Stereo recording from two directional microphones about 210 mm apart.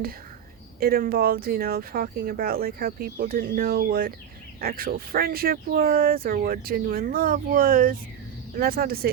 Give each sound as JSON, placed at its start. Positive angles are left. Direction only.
{"t": 0.8, "sound": "speech", "side_deg": -45}